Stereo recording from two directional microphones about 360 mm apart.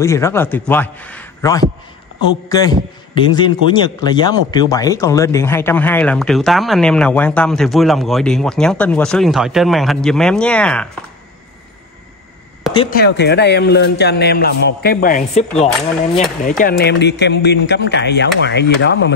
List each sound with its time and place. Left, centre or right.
0.0 s a man's voice: centre
12.9 s a man's voice: left